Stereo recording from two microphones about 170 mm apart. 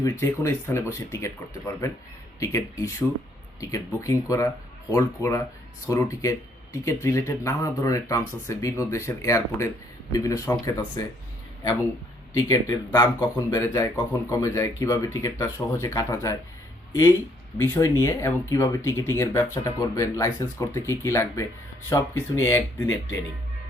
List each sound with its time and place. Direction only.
0.0 s speech: 15° left (ahead or behind)
12.5 s speech: 20° left (ahead or behind)